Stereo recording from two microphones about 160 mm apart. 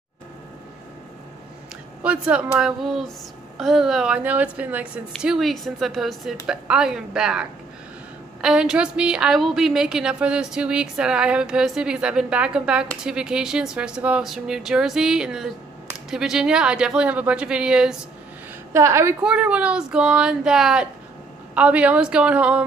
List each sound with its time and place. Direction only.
2.0 s a woman's voice: 5° right (ahead or behind)
18.7 s a woman's voice: 15° right (ahead or behind)
19.2 s a woman's voice: 5° right (ahead or behind)